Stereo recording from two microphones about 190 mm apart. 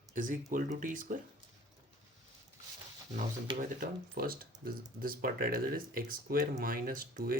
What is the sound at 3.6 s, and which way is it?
Speech, 50° right (ahead or behind).